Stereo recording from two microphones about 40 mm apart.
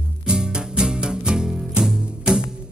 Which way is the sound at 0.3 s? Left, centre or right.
Right.